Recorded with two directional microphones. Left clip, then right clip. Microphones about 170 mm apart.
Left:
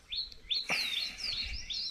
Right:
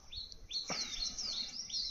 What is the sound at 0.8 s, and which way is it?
Chirp, 20° right (ahead or behind).